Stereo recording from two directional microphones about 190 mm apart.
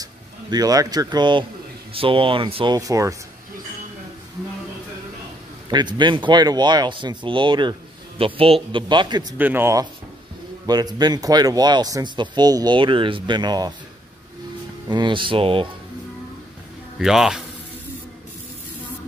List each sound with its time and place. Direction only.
0.0 s speech: 20° right (ahead or behind)
5.7 s speech: 25° right (ahead or behind)
9.4 s speech: 10° right (ahead or behind)
14.9 s speech: 25° right (ahead or behind)
17.0 s speech: centre (ahead or behind)